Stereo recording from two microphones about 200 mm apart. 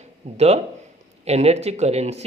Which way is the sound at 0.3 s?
30° right (ahead or behind).